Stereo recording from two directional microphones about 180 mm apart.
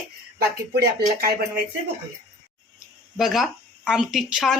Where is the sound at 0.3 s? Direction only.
65° right (ahead or behind).